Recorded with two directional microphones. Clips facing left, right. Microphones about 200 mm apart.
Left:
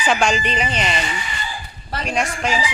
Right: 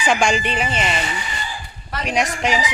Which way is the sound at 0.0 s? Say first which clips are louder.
Even; 15° right (ahead or behind).